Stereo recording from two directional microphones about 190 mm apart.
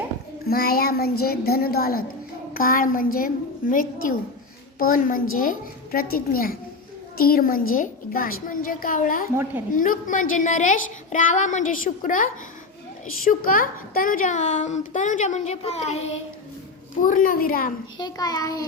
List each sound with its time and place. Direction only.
0.4 s a woman's voice: 55° left (ahead or behind)
9.3 s a woman's voice: 15° right (ahead or behind)
9.7 s a woman's voice: 45° left (ahead or behind)
17.9 s a child's voice: 20° left (ahead or behind)